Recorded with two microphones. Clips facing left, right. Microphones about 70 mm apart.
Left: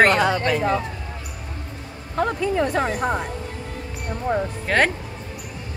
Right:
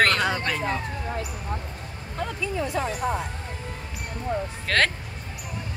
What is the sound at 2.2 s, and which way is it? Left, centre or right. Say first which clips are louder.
Music: left 8 dB; left.